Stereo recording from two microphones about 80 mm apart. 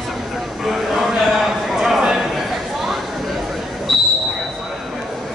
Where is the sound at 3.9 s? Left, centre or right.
Centre.